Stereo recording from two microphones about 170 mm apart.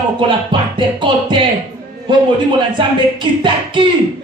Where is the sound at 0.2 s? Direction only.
30° right (ahead or behind).